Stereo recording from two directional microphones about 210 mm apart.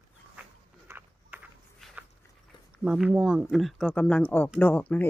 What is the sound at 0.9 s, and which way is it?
Walk, 5° right (ahead or behind).